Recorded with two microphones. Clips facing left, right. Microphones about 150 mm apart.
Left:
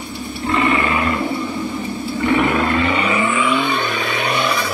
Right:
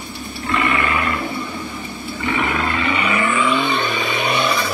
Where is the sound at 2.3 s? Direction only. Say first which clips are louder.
Left 4 dB; 35° left (ahead or behind).